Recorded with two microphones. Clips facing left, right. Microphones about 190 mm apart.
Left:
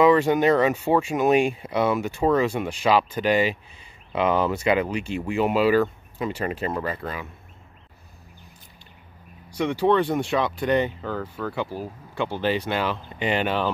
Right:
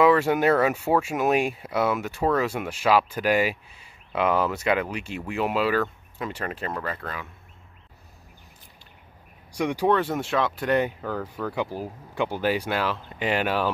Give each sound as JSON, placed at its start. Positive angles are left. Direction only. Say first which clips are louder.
{"t": 0.0, "sound": "speech", "louder": "left 2 dB", "side_deg": -5}
{"t": 9.5, "sound": "speech", "louder": "left 2 dB", "side_deg": -10}